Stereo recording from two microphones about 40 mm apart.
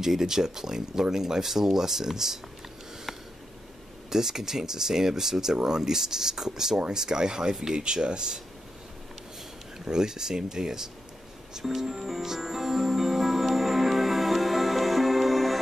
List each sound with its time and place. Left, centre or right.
0.0 s speech: centre
4.1 s speech: centre
9.8 s speech: centre
11.5 s music: centre